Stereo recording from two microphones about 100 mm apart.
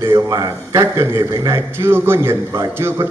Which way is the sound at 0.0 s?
30° right (ahead or behind).